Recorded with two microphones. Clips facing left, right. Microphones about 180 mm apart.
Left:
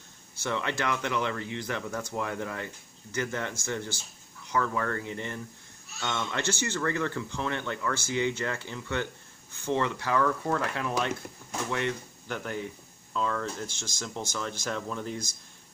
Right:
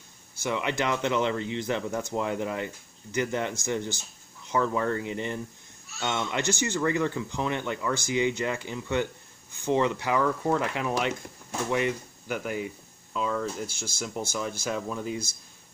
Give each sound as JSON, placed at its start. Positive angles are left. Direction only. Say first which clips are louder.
{"t": 0.4, "sound": "speech", "louder": "right 3 dB", "side_deg": -15}